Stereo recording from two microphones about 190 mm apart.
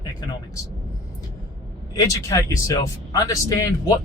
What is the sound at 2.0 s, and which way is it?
Speech, 15° left (ahead or behind).